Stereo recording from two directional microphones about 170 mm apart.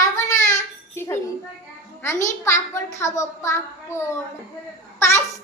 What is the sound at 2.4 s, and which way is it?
A child's voice, 15° left (ahead or behind).